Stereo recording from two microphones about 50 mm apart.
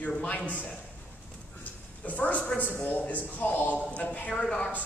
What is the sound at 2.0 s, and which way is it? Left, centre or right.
Speech, left.